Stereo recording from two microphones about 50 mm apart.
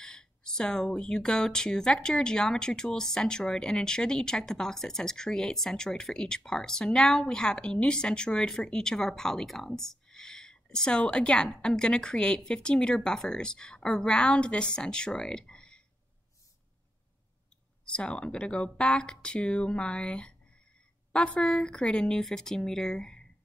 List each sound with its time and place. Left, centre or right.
0.0 s speech: centre
17.8 s a woman's voice: left